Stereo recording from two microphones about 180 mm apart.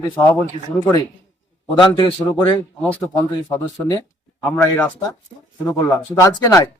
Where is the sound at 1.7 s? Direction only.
25° left (ahead or behind).